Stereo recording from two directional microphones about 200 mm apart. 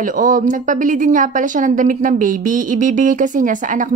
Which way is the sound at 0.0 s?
40° right (ahead or behind).